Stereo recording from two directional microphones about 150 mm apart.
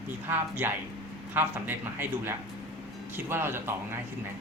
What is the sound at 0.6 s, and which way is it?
A man's voice, 15° right (ahead or behind).